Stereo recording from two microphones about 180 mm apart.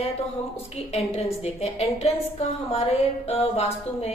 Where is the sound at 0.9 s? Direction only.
35° left (ahead or behind).